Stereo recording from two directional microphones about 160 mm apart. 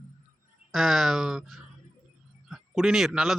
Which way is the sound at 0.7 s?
Centre (ahead or behind).